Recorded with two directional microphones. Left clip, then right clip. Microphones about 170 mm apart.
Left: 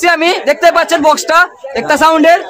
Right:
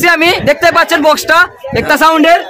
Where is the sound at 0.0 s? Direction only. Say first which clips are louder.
Right 2 dB; 15° right (ahead or behind).